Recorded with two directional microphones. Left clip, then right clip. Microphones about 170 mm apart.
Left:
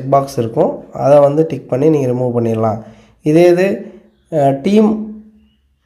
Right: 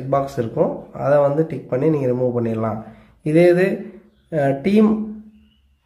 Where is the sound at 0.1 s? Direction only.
30° left (ahead or behind).